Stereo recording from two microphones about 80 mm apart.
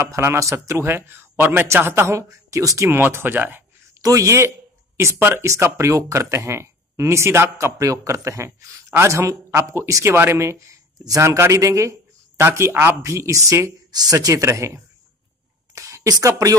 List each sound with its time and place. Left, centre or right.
0.0 s speech: right
2.9 s speech: right
4.0 s speech: right
13.9 s speech: right
15.7 s a sound: right
16.3 s speech: right